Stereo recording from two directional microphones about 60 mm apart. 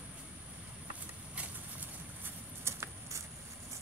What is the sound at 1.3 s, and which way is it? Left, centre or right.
Horse, right.